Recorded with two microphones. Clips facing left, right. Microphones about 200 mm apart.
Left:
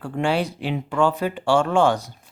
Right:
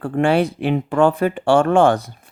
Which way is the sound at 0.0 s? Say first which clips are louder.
Right 6 dB; 55° right (ahead or behind).